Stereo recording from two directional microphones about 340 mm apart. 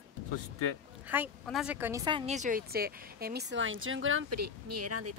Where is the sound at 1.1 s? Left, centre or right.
Centre.